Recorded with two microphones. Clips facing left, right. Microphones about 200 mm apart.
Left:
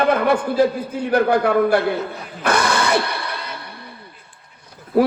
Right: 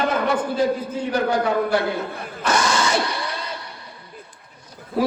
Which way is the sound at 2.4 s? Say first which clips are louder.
Left 2 dB; 60° left (ahead or behind).